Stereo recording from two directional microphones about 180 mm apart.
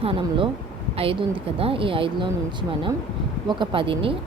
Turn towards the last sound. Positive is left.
turn(degrees=-30)  # may be behind; listen again after turning